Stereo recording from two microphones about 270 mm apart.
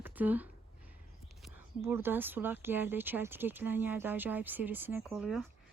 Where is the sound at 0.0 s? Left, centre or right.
Centre.